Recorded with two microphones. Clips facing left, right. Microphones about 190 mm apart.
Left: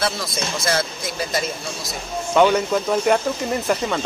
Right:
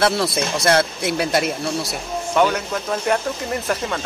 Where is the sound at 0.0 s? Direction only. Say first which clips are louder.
Right 6 dB; 65° right (ahead or behind).